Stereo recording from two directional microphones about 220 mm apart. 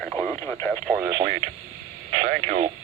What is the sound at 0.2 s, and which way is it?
Radio, 5° left (ahead or behind).